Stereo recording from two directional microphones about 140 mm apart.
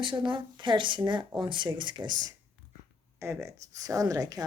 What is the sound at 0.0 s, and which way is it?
A woman's voice, 35° right (ahead or behind).